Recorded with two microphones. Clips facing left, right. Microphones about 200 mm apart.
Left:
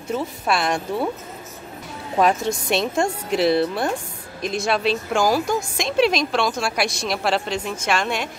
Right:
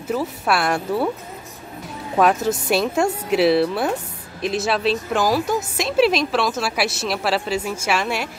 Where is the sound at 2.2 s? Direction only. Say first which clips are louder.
Right 2 dB; 5° right (ahead or behind).